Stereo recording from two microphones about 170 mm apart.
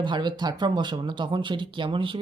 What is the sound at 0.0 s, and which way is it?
Speech, 25° right (ahead or behind).